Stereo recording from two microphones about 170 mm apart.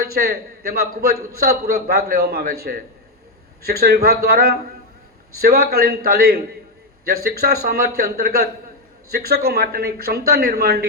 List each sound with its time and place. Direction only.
0.0 s a man's voice: 65° right (ahead or behind)